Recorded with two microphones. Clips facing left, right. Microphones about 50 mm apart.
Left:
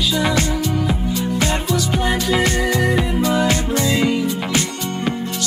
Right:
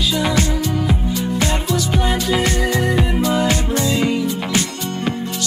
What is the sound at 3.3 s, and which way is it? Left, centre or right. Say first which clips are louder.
Music: left 1 dB; right.